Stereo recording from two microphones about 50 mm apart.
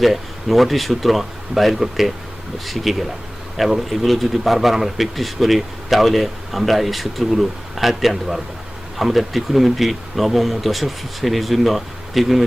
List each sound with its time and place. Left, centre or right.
0.0 s a man's voice: centre